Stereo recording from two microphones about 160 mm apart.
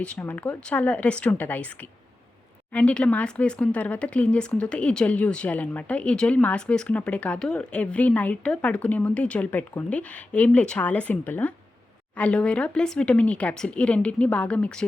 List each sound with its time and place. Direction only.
0.0 s speech: 10° left (ahead or behind)